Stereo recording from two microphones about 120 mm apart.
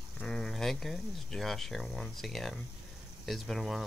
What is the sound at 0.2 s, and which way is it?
Speech, 5° left (ahead or behind).